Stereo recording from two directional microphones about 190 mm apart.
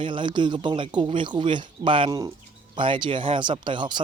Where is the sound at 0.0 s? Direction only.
25° right (ahead or behind).